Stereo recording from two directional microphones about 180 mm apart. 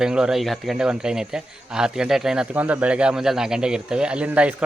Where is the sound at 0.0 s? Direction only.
5° right (ahead or behind).